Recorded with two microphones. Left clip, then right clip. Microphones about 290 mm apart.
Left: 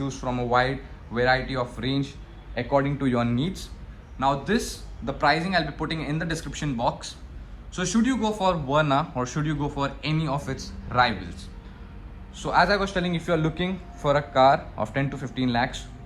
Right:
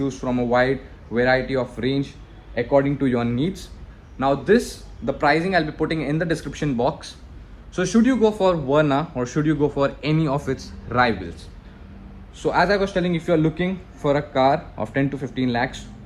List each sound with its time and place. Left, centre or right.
0.0 s a man's voice: centre